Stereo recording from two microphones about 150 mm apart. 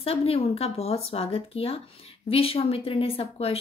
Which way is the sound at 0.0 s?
40° left (ahead or behind).